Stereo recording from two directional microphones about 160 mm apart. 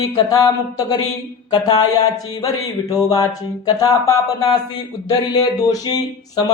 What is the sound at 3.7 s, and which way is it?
Music, 20° left (ahead or behind).